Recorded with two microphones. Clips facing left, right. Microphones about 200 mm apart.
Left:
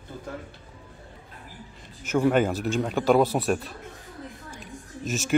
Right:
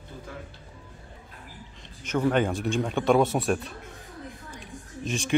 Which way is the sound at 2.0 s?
5° left (ahead or behind).